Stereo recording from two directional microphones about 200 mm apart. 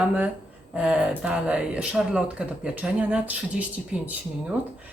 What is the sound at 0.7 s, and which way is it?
Speech, 5° right (ahead or behind).